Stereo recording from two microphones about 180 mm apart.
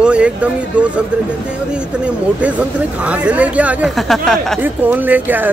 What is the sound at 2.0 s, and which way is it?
Speech, 5° right (ahead or behind).